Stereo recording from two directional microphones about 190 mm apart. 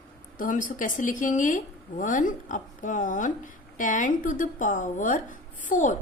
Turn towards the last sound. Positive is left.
turn(degrees=40)  # may be behind; listen again after turning